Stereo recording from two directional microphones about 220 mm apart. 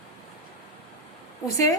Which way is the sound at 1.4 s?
15° left (ahead or behind).